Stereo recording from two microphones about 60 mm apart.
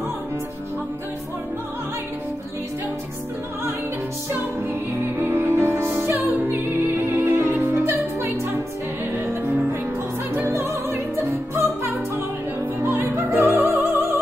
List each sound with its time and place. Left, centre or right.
5.2 s music: right
10.5 s opera: right
12.8 s music: right